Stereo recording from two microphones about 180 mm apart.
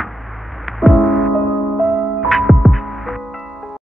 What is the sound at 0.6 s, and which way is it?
Music, centre (ahead or behind).